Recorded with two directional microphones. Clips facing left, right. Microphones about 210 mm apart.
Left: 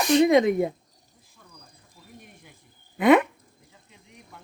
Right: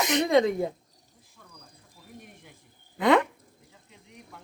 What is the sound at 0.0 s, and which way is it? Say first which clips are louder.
Speech: left 7 dB; 20° right (ahead or behind).